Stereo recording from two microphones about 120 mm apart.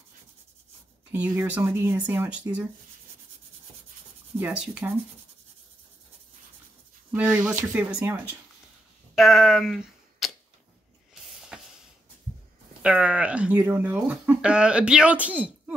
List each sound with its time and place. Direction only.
1.1 s speech: 15° right (ahead or behind)
4.4 s speech: 10° right (ahead or behind)
7.2 s speech: 10° right (ahead or behind)
9.1 s a sound: centre (ahead or behind)
12.8 s speech: 10° right (ahead or behind)